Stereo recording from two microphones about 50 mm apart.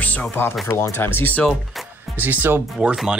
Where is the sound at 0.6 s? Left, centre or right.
Left.